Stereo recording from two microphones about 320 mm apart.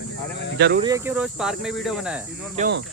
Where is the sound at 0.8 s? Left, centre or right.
Centre.